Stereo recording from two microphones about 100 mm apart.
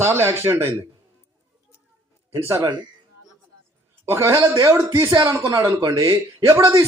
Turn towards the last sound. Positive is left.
turn(degrees=-30)  # may be behind; listen again after turning